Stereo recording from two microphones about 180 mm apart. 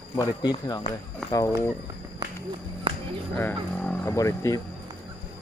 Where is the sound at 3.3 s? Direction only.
10° left (ahead or behind).